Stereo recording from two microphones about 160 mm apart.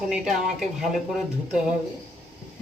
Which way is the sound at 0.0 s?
5° right (ahead or behind).